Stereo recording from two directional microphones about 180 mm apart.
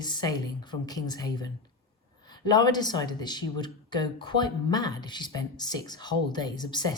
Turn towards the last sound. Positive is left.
turn(degrees=25)  # may be behind; listen again after turning